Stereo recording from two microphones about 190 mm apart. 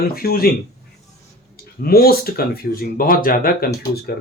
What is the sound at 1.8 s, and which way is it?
Speech, 50° left (ahead or behind).